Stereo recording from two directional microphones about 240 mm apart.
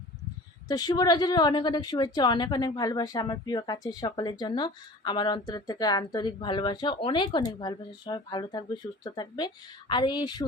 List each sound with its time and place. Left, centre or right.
0.7 s a woman's voice: centre